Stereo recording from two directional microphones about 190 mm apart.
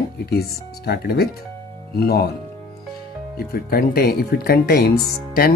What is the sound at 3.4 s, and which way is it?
Speech, 55° left (ahead or behind).